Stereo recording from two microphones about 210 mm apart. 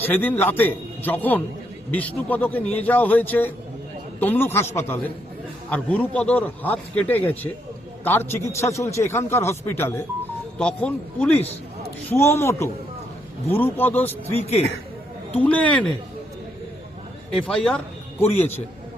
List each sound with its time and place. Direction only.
0.0 s a man's voice: 10° left (ahead or behind)
14.4 s speech: 30° left (ahead or behind)
15.4 s a man's voice: 5° left (ahead or behind)
17.4 s speech: 5° left (ahead or behind)